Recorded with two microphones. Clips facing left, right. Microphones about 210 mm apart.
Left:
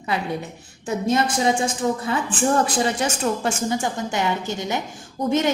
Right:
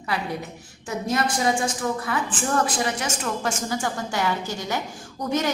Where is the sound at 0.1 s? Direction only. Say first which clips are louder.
Left 3 dB; 25° left (ahead or behind).